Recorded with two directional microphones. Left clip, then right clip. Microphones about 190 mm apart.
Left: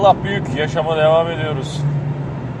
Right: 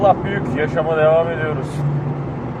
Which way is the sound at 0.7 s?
50° left (ahead or behind).